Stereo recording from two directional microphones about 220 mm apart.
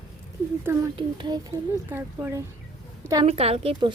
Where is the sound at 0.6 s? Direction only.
15° right (ahead or behind).